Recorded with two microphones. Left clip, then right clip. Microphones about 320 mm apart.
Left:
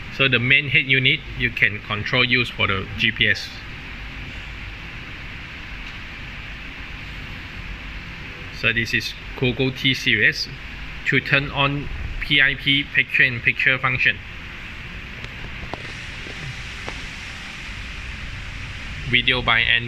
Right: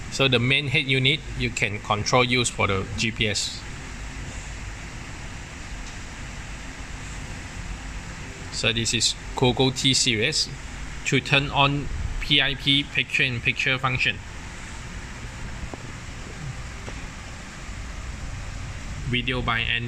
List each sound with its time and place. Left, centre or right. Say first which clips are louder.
0.2 s speech: left 4 dB; centre
8.5 s speech: left 3 dB; centre
19.1 s speech: left 8 dB; centre